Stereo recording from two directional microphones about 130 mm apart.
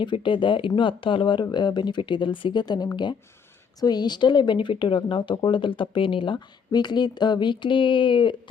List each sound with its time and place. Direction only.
0.0 s speech: 40° left (ahead or behind)